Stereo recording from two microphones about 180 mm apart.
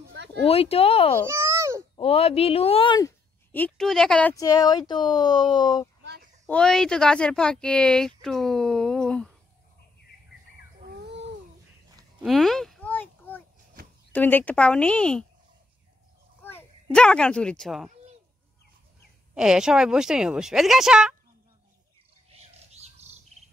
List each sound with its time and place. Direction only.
0.1 s a sound: 75° right (ahead or behind)
0.5 s speech: 35° left (ahead or behind)
1.2 s babbling: 15° right (ahead or behind)
2.0 s speech: 35° left (ahead or behind)
3.5 s speech: 5° left (ahead or behind)
4.4 s speech: 20° left (ahead or behind)
6.4 s speech: 5° left (ahead or behind)
12.2 s a sound: centre (ahead or behind)
14.1 s speech: 10° left (ahead or behind)
16.4 s a child's voice: 10° left (ahead or behind)
19.3 s speech: 5° right (ahead or behind)
22.4 s bird: 35° right (ahead or behind)